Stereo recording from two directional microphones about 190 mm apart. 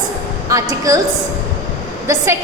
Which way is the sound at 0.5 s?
15° right (ahead or behind).